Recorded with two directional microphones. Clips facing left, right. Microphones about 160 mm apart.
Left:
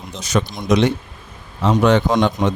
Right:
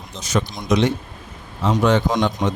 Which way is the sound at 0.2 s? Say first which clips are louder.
Left 2 dB; 75° left (ahead or behind).